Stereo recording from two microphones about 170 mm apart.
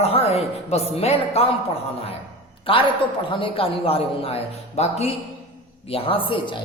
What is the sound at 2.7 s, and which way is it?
A man's voice, 30° left (ahead or behind).